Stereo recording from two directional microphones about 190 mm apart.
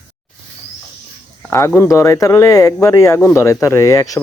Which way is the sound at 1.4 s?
10° left (ahead or behind).